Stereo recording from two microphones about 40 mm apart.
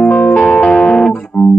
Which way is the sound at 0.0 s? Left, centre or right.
Left.